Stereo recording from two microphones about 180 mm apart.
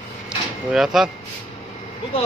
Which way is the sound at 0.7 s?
Centre (ahead or behind).